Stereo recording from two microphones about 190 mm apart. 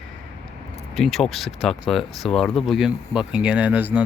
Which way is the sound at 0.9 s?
Centre (ahead or behind).